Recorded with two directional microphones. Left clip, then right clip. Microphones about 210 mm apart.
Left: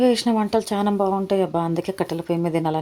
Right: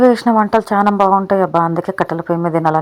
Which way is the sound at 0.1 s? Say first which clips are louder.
Right 8 dB; 10° right (ahead or behind).